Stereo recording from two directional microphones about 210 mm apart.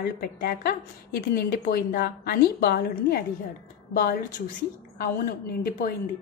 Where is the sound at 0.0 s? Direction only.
45° left (ahead or behind).